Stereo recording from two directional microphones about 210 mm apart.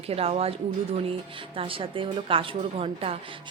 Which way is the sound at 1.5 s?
25° right (ahead or behind).